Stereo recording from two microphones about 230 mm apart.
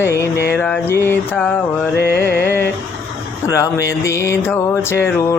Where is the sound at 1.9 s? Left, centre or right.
Left.